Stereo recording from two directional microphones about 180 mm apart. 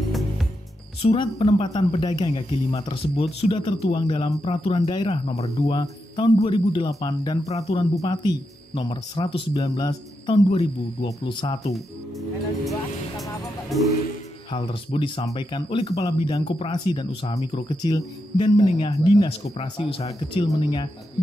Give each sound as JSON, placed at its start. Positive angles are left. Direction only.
{"t": 1.0, "sound": "a man's voice", "side_deg": 30}
{"t": 7.4, "sound": "speech", "side_deg": 35}
{"t": 8.0, "sound": "a man's voice", "side_deg": 25}
{"t": 11.7, "sound": "speech", "side_deg": 0}
{"t": 14.5, "sound": "a man's voice", "side_deg": 30}